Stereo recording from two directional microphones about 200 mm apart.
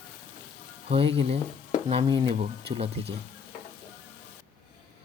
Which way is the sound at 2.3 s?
35° right (ahead or behind).